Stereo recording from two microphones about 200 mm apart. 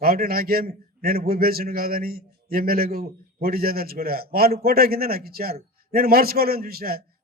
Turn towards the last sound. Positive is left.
turn(degrees=-50)  # may be behind; listen again after turning